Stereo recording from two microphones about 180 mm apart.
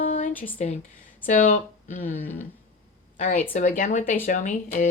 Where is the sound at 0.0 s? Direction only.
45° left (ahead or behind).